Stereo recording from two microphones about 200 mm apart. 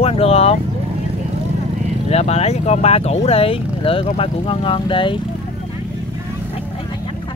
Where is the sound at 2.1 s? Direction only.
35° left (ahead or behind).